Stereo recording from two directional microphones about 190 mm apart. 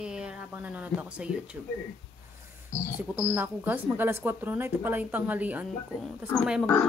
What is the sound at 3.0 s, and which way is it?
Speech, 10° right (ahead or behind).